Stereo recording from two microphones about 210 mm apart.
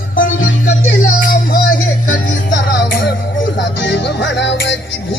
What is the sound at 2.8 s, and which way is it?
Music, 50° left (ahead or behind).